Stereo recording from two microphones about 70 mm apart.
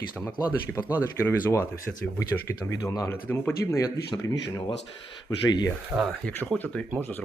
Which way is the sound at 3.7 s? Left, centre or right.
Left.